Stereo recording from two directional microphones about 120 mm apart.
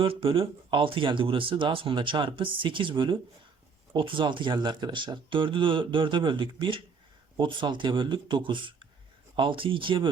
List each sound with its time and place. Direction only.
0.0 s speech: 50° right (ahead or behind)